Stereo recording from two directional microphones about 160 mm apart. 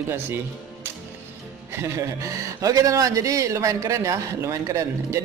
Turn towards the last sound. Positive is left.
turn(degrees=-20)  # may be behind; listen again after turning